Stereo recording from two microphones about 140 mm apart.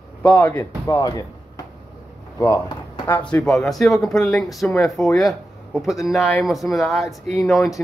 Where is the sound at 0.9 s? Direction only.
25° left (ahead or behind).